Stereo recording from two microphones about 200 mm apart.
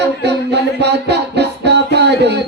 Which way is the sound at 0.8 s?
55° right (ahead or behind).